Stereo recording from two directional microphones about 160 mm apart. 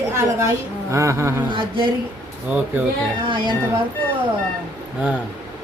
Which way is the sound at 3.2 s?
30° right (ahead or behind).